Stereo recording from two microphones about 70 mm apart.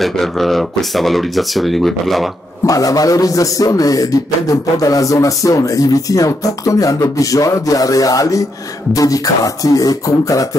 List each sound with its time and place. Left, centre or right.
0.0 s speech: centre
2.6 s a man's voice: left